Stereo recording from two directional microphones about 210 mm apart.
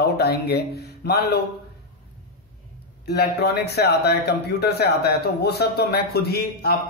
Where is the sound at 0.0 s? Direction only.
50° left (ahead or behind).